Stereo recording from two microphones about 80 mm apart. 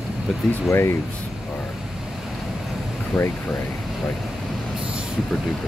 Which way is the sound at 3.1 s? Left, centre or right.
Centre.